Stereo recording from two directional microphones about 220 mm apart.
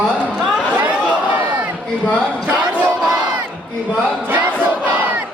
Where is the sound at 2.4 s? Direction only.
5° right (ahead or behind).